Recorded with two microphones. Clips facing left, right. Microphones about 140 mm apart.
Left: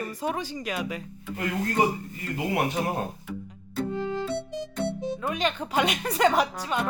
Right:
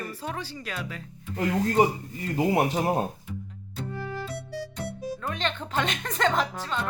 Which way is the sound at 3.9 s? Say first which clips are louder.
Left 4 dB; 20° left (ahead or behind).